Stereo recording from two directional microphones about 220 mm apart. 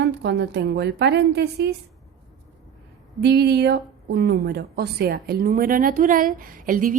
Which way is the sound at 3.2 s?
50° right (ahead or behind).